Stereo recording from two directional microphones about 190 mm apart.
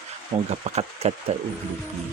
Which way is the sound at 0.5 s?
35° right (ahead or behind).